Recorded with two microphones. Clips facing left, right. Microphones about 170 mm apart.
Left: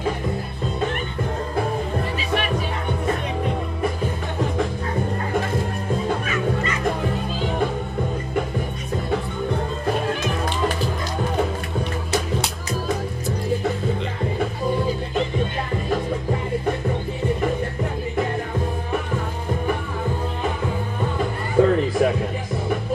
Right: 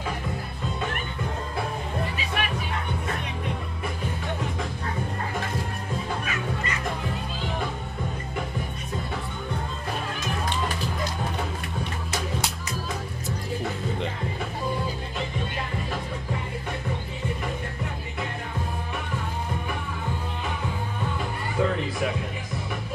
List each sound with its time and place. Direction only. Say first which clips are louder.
2.1 s music: left 6 dB; 35° left (ahead or behind)
21.5 s music: left 9 dB; 50° left (ahead or behind)